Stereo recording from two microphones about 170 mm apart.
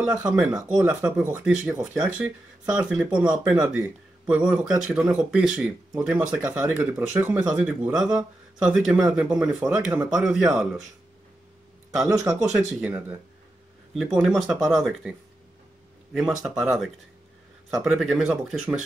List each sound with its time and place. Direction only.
0.2 s speech: 5° right (ahead or behind)
12.5 s a man's voice: 5° right (ahead or behind)